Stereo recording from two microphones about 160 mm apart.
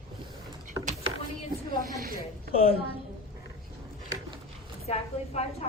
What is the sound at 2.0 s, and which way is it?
Speech, 70° right (ahead or behind).